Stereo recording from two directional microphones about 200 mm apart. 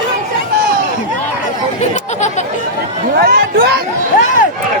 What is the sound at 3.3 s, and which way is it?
Speech, 50° right (ahead or behind).